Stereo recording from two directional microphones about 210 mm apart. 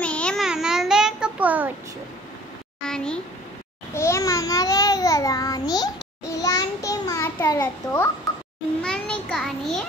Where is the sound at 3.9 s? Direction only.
15° left (ahead or behind).